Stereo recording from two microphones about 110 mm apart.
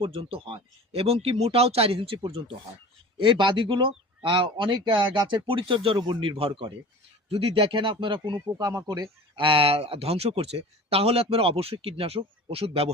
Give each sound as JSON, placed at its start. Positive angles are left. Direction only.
{"t": 0.0, "sound": "speech", "side_deg": -60}
{"t": 8.5, "sound": "speech", "side_deg": -35}
{"t": 9.4, "sound": "speech", "side_deg": -55}